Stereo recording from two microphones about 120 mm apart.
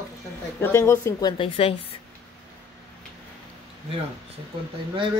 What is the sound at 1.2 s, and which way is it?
Speech, 35° left (ahead or behind).